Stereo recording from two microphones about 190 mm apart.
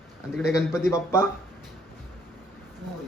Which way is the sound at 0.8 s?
15° left (ahead or behind).